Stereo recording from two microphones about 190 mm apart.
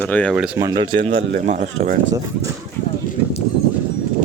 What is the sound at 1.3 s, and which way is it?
Speech, 40° right (ahead or behind).